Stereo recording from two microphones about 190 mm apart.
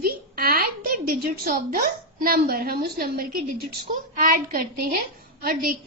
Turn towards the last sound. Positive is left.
turn(degrees=-50)  # may be behind; listen again after turning